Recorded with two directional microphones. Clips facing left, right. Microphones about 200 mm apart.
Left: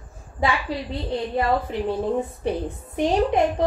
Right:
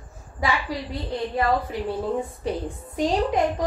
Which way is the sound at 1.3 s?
20° left (ahead or behind).